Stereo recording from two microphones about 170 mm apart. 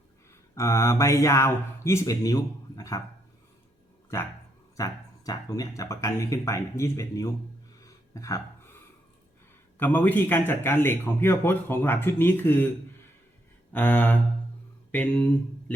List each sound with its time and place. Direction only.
0.5 s a man's voice: 15° left (ahead or behind)
4.8 s speech: 20° left (ahead or behind)
7.8 s a sound: 20° left (ahead or behind)
9.7 s a man's voice: 10° left (ahead or behind)
13.7 s a man's voice: 10° left (ahead or behind)